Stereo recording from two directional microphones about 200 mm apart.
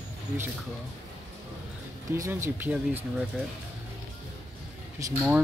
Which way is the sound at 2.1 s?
10° right (ahead or behind).